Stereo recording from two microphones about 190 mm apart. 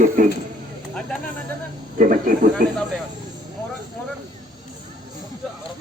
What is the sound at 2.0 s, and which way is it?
Speech, 45° right (ahead or behind).